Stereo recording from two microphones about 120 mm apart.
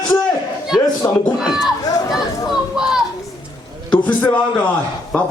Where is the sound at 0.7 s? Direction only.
Centre (ahead or behind).